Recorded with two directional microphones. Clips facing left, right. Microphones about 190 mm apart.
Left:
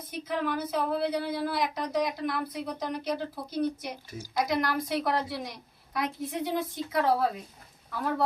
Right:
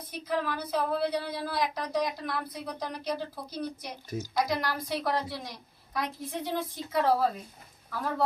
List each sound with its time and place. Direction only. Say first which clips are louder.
0.1 s a woman's voice: left 1 dB; centre (ahead or behind)